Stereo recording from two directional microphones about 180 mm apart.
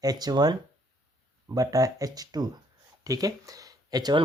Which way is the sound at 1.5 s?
20° right (ahead or behind).